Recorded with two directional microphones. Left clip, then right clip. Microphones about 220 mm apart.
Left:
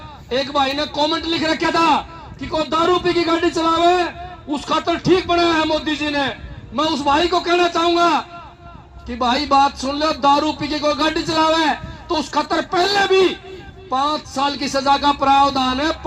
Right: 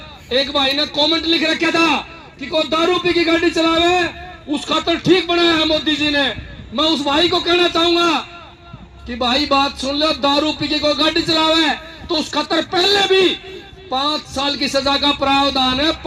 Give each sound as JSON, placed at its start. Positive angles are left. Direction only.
{"t": 0.3, "sound": "speech", "side_deg": -45}